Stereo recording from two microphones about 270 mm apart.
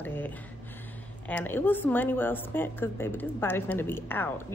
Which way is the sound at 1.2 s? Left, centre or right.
Centre.